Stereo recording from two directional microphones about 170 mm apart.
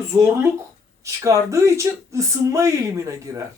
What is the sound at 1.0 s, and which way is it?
A man's voice, 20° right (ahead or behind).